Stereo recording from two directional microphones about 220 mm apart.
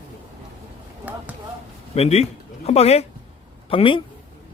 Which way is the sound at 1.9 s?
30° left (ahead or behind).